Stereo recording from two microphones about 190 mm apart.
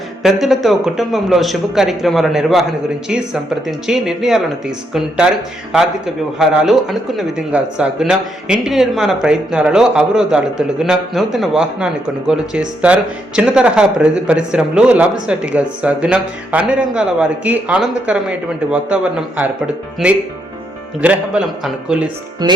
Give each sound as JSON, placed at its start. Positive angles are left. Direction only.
{"t": 0.2, "sound": "speech", "side_deg": 0}
{"t": 3.7, "sound": "speech", "side_deg": 0}
{"t": 6.4, "sound": "a man's voice", "side_deg": -5}
{"t": 22.4, "sound": "music", "side_deg": -20}